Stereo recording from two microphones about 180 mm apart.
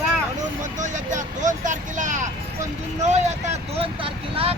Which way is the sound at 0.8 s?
45° right (ahead or behind).